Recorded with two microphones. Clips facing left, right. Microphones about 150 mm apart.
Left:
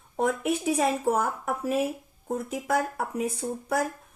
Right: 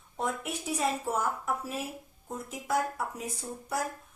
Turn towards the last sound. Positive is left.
turn(degrees=60)  # may be behind; listen again after turning